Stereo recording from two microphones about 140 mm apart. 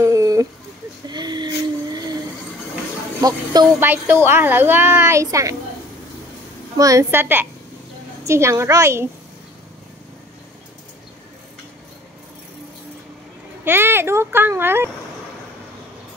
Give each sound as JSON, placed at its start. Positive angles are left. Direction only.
{"t": 0.0, "sound": "a sound", "side_deg": -25}
{"t": 3.2, "sound": "speech", "side_deg": -25}
{"t": 3.8, "sound": "a child's voice", "side_deg": -15}
{"t": 6.8, "sound": "a child's voice", "side_deg": -25}
{"t": 13.7, "sound": "a child's voice", "side_deg": -15}